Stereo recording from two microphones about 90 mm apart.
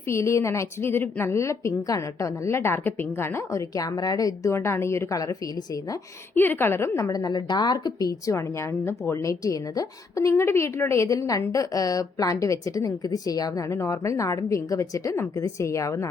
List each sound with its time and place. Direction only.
0.1 s a woman's voice: 30° left (ahead or behind)
3.8 s a woman's voice: 45° left (ahead or behind)
4.5 s a woman's voice: 30° left (ahead or behind)
6.3 s a woman's voice: 20° left (ahead or behind)
9.4 s a woman's voice: 40° left (ahead or behind)